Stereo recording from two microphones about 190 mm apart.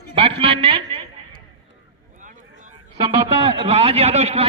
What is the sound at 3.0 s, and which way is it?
A man's voice, 30° right (ahead or behind).